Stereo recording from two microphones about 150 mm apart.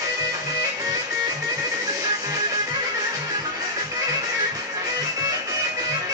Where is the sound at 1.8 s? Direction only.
20° right (ahead or behind).